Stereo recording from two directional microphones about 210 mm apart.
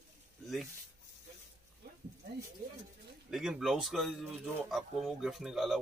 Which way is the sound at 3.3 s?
Centre (ahead or behind).